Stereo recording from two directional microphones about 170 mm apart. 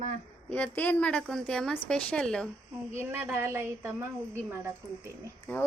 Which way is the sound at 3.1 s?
15° right (ahead or behind).